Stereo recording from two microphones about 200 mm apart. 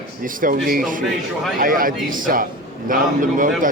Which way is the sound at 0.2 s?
45° right (ahead or behind).